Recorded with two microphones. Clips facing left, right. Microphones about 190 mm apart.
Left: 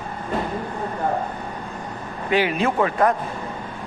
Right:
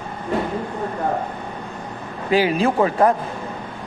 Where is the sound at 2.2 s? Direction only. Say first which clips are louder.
Right 3 dB; 35° right (ahead or behind).